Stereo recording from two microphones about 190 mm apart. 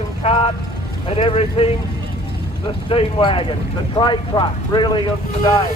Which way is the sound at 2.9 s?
30° left (ahead or behind).